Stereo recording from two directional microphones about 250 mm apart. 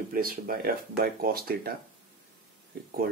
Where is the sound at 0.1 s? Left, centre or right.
Right.